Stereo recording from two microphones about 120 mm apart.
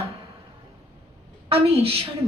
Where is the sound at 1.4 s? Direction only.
55° right (ahead or behind).